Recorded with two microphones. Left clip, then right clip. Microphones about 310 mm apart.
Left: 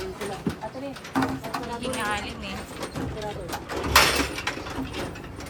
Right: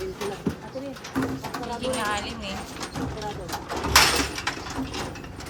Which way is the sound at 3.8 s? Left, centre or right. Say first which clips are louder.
Even; right.